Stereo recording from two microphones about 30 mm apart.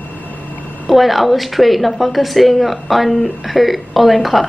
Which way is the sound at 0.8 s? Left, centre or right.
Centre.